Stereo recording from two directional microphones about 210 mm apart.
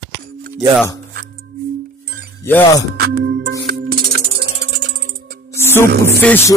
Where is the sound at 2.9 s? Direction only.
50° right (ahead or behind).